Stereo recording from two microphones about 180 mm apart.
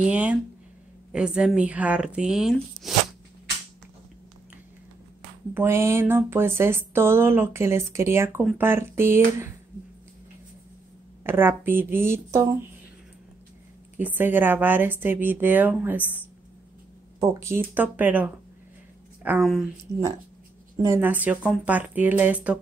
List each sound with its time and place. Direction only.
0.0 s a sound: 10° right (ahead or behind)
1.1 s speech: 5° right (ahead or behind)
5.5 s speech: 15° right (ahead or behind)
11.2 s speech: 10° right (ahead or behind)
13.9 s speech: 10° right (ahead or behind)
16.0 s a woman's voice: 10° left (ahead or behind)
17.2 s speech: 15° right (ahead or behind); by 19.7 s centre (ahead or behind)
20.7 s speech: 15° right (ahead or behind)